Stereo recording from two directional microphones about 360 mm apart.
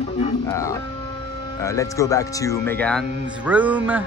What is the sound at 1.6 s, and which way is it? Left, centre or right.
Speech, centre.